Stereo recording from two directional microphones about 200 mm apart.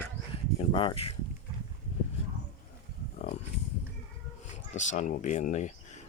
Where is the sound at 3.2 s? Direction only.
40° left (ahead or behind).